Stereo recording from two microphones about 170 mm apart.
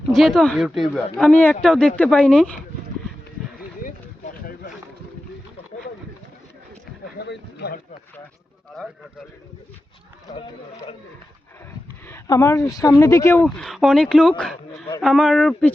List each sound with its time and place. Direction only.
0.1 s speech: centre (ahead or behind)
3.8 s a sound: 50° left (ahead or behind)
7.2 s speech: 70° left (ahead or behind)
12.0 s speech: 15° left (ahead or behind)
13.6 s speech: centre (ahead or behind)